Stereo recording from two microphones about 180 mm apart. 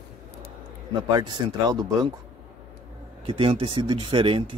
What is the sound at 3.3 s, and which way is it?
Speech, 30° right (ahead or behind).